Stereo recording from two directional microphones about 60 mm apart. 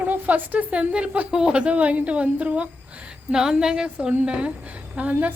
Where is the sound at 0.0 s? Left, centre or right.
Right.